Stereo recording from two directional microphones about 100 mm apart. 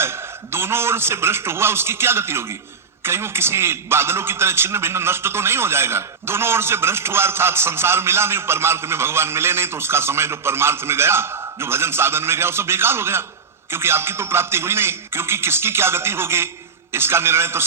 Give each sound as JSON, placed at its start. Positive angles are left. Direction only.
{"t": 0.0, "sound": "a man's voice", "side_deg": -25}